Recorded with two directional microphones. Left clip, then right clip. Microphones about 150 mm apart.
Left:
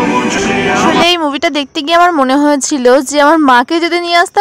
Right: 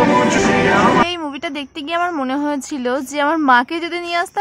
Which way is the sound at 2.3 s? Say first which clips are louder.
Left 10 dB; 50° left (ahead or behind).